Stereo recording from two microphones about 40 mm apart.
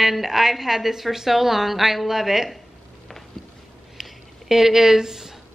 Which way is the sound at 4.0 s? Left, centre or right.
Centre.